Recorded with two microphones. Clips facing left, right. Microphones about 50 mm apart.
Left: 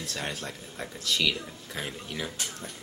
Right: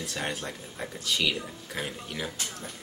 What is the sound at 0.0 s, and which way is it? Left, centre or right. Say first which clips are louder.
Speech: right 2 dB; centre.